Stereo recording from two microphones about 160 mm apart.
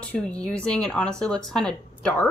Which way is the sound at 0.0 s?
10° left (ahead or behind).